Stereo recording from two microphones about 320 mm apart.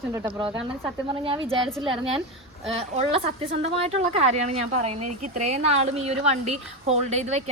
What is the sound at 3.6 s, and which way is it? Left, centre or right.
Speech, centre.